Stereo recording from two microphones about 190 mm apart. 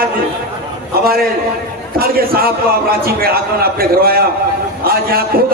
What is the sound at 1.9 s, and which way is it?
A man's voice, 50° right (ahead or behind).